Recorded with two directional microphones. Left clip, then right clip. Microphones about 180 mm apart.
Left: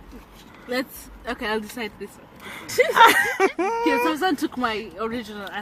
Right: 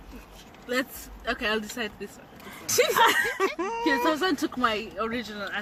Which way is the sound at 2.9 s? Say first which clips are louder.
Left 10 dB; 30° left (ahead or behind).